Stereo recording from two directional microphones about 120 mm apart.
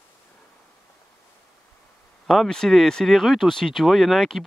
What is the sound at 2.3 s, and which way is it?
Speech, 5° left (ahead or behind).